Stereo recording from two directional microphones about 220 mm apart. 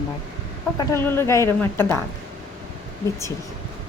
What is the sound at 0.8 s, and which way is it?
Speech, 10° left (ahead or behind).